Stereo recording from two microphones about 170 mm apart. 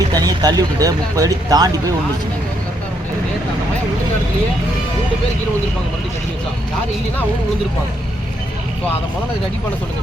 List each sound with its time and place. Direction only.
0.1 s speech: 25° right (ahead or behind)